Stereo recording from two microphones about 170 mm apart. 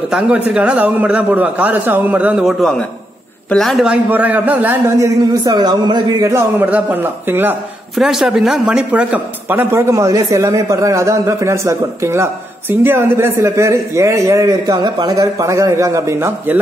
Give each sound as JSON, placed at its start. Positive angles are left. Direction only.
{"t": 0.1, "sound": "a man's voice", "side_deg": -5}
{"t": 6.3, "sound": "speech", "side_deg": -10}
{"t": 7.9, "sound": "speech", "side_deg": 0}